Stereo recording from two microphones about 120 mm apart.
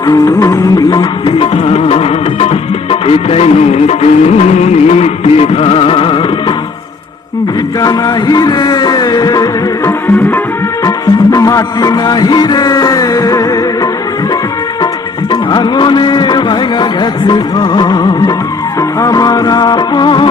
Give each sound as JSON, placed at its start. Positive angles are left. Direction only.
{"t": 0.1, "sound": "music", "side_deg": 30}
{"t": 1.4, "sound": "music", "side_deg": 55}
{"t": 7.8, "sound": "music", "side_deg": 35}
{"t": 15.3, "sound": "music", "side_deg": 35}